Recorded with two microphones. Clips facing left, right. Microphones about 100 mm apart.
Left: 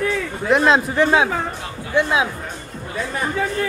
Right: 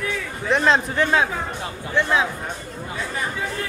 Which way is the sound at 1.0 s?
15° left (ahead or behind).